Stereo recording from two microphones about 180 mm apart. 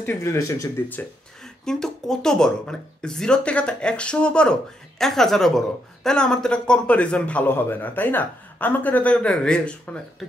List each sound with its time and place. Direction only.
0.0 s a man's voice: 15° left (ahead or behind)